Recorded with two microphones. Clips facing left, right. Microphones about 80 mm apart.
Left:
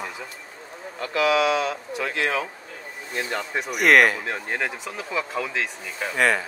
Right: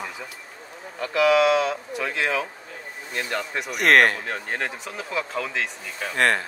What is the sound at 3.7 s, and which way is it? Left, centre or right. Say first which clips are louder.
Speech: left 1 dB; centre.